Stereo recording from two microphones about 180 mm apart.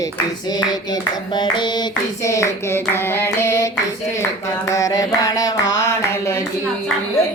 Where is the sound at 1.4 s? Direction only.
25° left (ahead or behind).